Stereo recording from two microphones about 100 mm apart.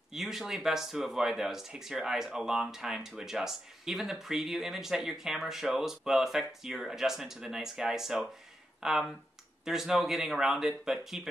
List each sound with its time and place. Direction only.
0.1 s speech: 5° right (ahead or behind)